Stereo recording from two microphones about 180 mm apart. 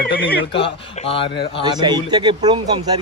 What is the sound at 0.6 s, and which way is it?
A man's voice, 30° left (ahead or behind).